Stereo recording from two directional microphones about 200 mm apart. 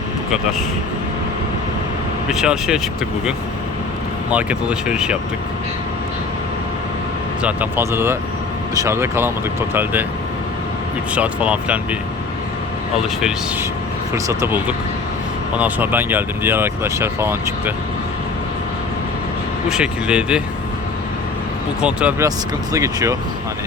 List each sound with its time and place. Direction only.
2.3 s speech: 5° right (ahead or behind)
4.3 s speech: 5° right (ahead or behind)
7.4 s speech: 10° right (ahead or behind)
11.1 s speech: 5° right (ahead or behind)
13.0 s speech: 5° right (ahead or behind)
19.6 s speech: 5° right (ahead or behind)
21.8 s speech: 5° right (ahead or behind)